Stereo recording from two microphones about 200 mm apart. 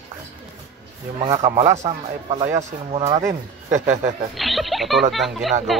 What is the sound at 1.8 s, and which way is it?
Speech, 35° right (ahead or behind).